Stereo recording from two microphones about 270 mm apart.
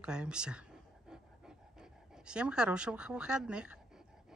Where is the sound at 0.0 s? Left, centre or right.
Centre.